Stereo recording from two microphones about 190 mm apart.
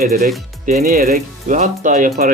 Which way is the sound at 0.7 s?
40° right (ahead or behind).